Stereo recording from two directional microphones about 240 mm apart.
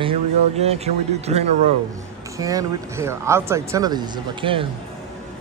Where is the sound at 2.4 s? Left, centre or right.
Centre.